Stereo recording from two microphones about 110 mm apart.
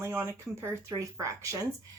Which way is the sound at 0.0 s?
25° right (ahead or behind).